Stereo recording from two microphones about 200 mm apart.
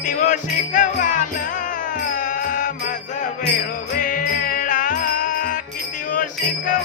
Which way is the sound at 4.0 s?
40° left (ahead or behind).